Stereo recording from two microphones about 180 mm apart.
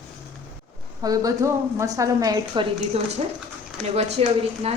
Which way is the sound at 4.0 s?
35° right (ahead or behind).